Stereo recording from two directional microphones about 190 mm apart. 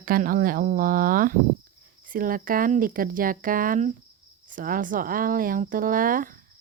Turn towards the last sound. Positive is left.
turn(degrees=-45)  # may be behind; listen again after turning